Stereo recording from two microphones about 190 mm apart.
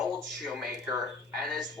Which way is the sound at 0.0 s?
Centre (ahead or behind).